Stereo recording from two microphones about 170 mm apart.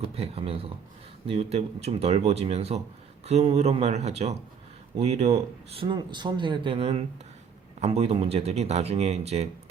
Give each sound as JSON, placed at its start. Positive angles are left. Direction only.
{"t": 0.0, "sound": "speech", "side_deg": -35}